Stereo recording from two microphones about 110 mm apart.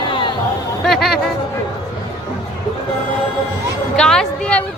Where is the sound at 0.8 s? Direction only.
Centre (ahead or behind).